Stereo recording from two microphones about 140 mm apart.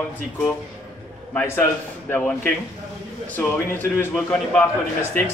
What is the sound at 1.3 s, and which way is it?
A man's voice, 15° left (ahead or behind).